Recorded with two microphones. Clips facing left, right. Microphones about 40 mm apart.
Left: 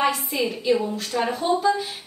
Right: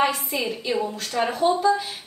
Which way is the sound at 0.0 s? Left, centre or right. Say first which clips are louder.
Even; centre.